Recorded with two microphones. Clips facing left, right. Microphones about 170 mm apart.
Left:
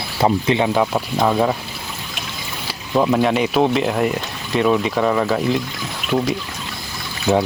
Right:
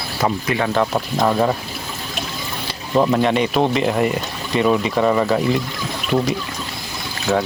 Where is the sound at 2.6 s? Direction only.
Centre (ahead or behind).